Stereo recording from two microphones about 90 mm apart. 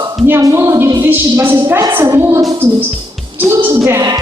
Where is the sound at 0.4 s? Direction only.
35° right (ahead or behind).